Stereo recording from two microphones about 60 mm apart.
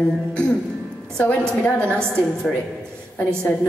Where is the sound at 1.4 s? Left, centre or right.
Centre.